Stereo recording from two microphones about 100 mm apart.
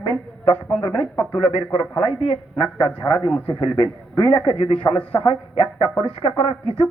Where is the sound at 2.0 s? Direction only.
75° left (ahead or behind).